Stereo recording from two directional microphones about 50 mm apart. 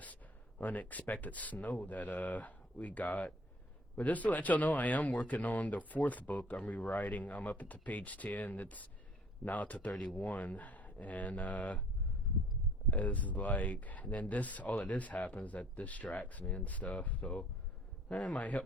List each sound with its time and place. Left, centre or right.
0.6 s speech: left
12.9 s speech: left